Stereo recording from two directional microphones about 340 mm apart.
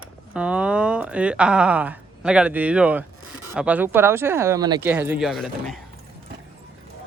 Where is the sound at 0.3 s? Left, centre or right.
Centre.